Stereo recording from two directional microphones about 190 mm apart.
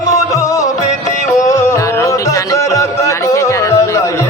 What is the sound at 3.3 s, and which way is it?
Music, 15° left (ahead or behind).